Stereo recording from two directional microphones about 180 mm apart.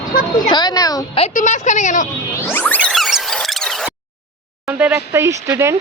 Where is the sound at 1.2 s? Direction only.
45° left (ahead or behind).